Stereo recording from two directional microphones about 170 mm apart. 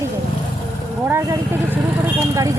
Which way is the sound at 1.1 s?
15° right (ahead or behind).